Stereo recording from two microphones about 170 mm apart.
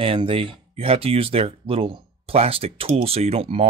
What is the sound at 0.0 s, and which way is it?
Speech, 30° right (ahead or behind).